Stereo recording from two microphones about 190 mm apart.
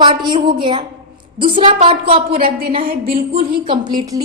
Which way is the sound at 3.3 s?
25° right (ahead or behind).